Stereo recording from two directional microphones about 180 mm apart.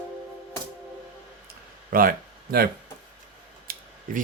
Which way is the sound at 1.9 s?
55° right (ahead or behind).